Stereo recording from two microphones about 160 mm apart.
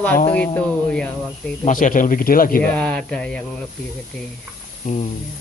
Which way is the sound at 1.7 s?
55° left (ahead or behind).